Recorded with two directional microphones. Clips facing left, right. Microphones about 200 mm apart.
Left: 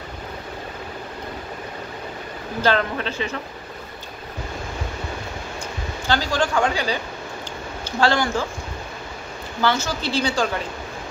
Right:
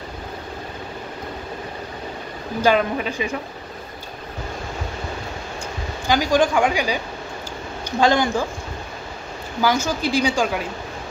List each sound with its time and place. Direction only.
2.6 s speech: 10° right (ahead or behind)
6.0 s speech: 15° right (ahead or behind)
8.0 s speech: 15° right (ahead or behind)
9.6 s speech: 10° right (ahead or behind)